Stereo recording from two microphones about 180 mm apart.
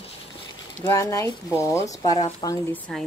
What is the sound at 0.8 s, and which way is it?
Speech, 15° left (ahead or behind).